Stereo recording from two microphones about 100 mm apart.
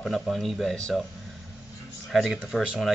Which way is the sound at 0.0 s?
Centre (ahead or behind).